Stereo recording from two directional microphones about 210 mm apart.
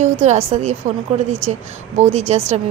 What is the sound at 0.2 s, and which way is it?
Speech, 30° right (ahead or behind).